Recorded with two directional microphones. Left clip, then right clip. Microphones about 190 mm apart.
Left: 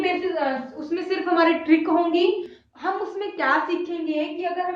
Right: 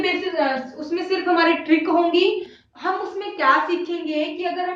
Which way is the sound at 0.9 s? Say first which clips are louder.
Right 3 dB; 15° left (ahead or behind).